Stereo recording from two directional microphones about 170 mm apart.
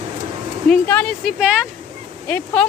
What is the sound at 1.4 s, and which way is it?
Speech, 5° right (ahead or behind).